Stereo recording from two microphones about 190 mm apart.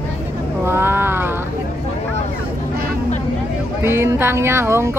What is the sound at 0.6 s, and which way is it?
Speech, 10° right (ahead or behind).